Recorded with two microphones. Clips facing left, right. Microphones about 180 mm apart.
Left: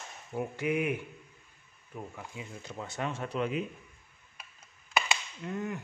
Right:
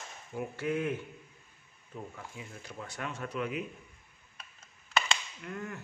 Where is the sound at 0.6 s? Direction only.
15° left (ahead or behind).